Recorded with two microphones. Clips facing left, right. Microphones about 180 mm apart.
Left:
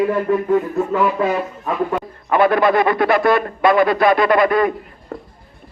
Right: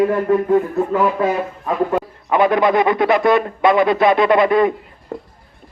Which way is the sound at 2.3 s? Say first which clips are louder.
Even; 20° right (ahead or behind).